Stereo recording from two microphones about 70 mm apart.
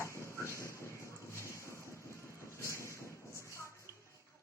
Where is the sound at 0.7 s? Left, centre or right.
Left.